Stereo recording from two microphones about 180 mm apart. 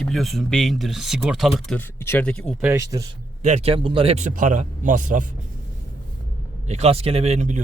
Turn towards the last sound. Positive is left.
turn(degrees=-40)  # may be behind; listen again after turning